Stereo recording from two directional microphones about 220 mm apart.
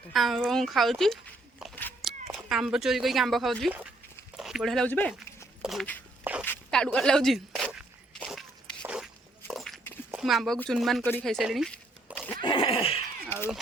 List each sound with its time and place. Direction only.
0.1 s speech: centre (ahead or behind)
4.4 s a sound: centre (ahead or behind)
12.4 s neigh: 25° left (ahead or behind)